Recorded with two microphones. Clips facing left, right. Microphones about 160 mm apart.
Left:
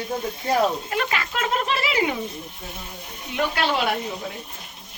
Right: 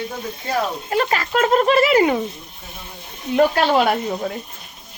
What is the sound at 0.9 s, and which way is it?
Speech, 35° right (ahead or behind).